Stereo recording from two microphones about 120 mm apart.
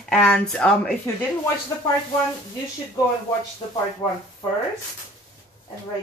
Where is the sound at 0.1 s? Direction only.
5° left (ahead or behind).